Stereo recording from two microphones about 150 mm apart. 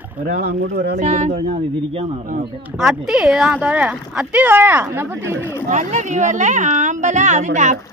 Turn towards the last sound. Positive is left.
turn(degrees=-55)  # may be behind; listen again after turning